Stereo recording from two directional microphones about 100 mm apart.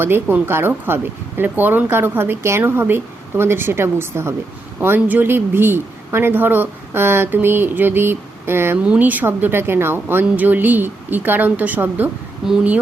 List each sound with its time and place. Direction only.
0.0 s speech: 20° right (ahead or behind)
12.4 s speech: 5° right (ahead or behind)